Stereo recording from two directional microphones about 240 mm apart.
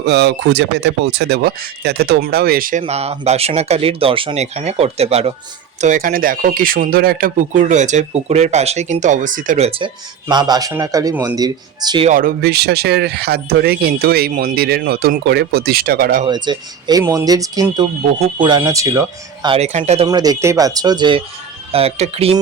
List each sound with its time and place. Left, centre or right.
0.0 s speech: right; by 12.0 s centre
12.0 s speech: right
16.2 s speech: centre
20.1 s speech: centre